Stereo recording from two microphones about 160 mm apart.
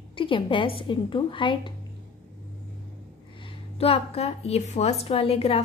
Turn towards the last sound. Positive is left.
turn(degrees=40)  # may be behind; listen again after turning